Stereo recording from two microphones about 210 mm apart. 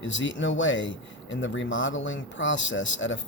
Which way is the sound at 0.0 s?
60° left (ahead or behind).